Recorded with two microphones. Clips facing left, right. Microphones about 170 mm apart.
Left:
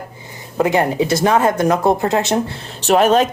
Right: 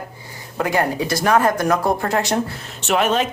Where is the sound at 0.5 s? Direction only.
20° left (ahead or behind).